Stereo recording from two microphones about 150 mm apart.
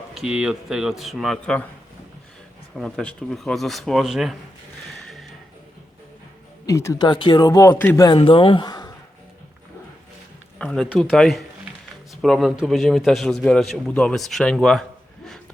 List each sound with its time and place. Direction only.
0.1 s a man's voice: 5° right (ahead or behind)
2.7 s a man's voice: 5° left (ahead or behind)
4.9 s music: centre (ahead or behind)
6.7 s speech: 20° left (ahead or behind)
7.1 s speech: 30° left (ahead or behind)
7.7 s a man's voice: 15° left (ahead or behind)
8.0 s speech: 35° left (ahead or behind)
10.6 s a man's voice: 5° left (ahead or behind)